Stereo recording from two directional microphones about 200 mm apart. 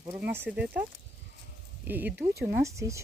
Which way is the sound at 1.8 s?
10° right (ahead or behind).